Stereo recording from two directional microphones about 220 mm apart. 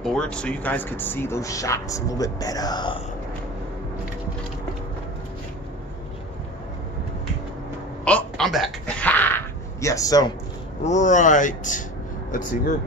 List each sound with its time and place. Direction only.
0.0 s speech: 5° left (ahead or behind); by 3.0 s 20° left (ahead or behind)
8.0 s a sound: 5° left (ahead or behind)
10.8 s speech: 35° left (ahead or behind)